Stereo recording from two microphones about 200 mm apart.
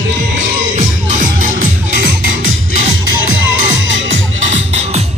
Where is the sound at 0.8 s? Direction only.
40° right (ahead or behind).